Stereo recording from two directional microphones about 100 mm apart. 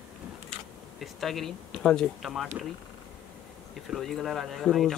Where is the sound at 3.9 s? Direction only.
Centre (ahead or behind).